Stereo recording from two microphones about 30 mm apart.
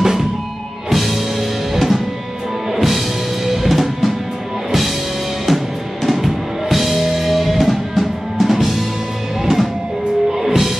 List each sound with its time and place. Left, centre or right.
0.0 s music: centre
0.8 s music: centre
3.4 s drum kit: centre
6.0 s music: centre